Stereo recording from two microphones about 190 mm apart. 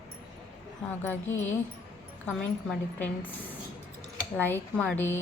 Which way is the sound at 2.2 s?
5° left (ahead or behind).